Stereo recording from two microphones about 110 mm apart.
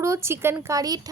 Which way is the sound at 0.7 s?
35° right (ahead or behind).